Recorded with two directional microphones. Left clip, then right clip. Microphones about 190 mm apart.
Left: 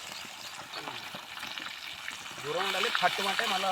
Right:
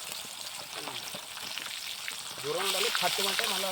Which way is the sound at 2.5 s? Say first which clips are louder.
Even; 30° right (ahead or behind).